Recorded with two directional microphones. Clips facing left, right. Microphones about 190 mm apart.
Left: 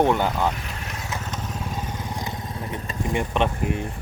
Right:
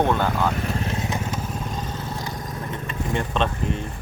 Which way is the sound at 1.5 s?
10° left (ahead or behind).